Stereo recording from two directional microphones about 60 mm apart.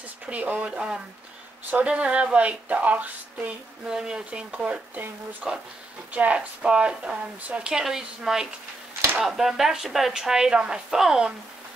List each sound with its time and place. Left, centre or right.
0.3 s speech: right
3.9 s speech: centre